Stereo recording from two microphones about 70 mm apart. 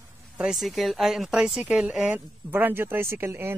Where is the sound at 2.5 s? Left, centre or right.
Right.